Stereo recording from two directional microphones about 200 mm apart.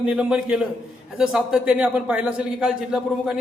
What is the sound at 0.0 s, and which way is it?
A man's voice, 5° right (ahead or behind).